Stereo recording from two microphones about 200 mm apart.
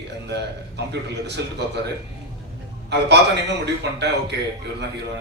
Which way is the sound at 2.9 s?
60° right (ahead or behind).